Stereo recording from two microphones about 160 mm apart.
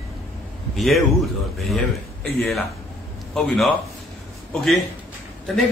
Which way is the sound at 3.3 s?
Centre (ahead or behind).